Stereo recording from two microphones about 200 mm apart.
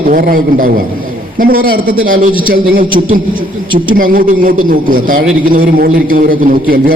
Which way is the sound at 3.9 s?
45° right (ahead or behind).